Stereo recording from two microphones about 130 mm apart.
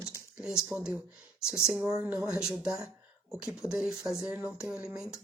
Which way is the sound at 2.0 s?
15° right (ahead or behind).